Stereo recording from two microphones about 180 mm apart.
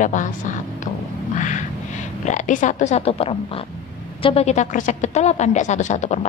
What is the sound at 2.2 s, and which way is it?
A woman's voice, 40° left (ahead or behind).